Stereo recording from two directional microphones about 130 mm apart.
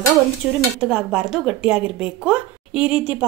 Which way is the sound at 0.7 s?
10° right (ahead or behind).